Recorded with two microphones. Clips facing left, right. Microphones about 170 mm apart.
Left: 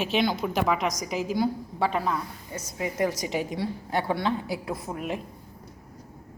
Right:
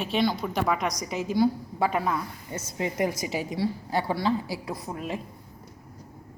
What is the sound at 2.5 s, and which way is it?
Speech, 25° right (ahead or behind).